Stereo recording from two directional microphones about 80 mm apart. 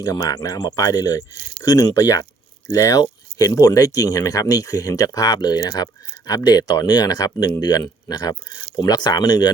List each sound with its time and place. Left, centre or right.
0.0 s speech: left